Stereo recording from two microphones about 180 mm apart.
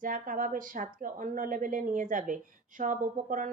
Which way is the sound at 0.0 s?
50° right (ahead or behind).